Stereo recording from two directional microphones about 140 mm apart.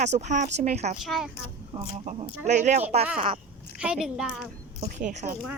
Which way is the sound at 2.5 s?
55° right (ahead or behind).